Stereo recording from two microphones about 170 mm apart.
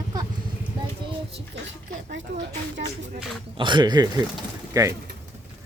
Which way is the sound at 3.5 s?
30° right (ahead or behind).